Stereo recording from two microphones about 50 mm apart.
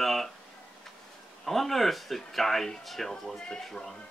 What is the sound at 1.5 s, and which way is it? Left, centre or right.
Speech, centre.